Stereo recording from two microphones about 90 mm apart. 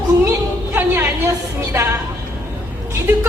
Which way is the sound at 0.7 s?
25° right (ahead or behind).